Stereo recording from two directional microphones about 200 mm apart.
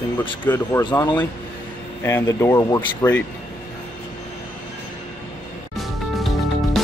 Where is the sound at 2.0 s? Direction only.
10° left (ahead or behind).